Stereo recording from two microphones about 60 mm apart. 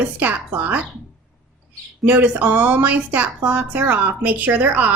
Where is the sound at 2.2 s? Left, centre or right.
Right.